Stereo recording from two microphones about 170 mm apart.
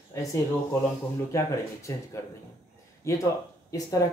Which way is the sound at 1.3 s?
15° left (ahead or behind).